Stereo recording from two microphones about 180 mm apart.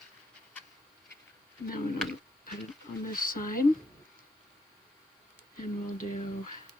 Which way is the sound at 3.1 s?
50° left (ahead or behind).